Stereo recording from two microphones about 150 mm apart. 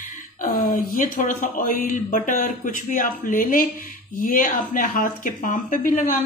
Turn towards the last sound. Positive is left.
turn(degrees=60)  # may be behind; listen again after turning